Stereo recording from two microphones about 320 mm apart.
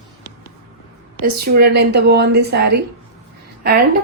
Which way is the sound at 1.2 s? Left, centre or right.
Right.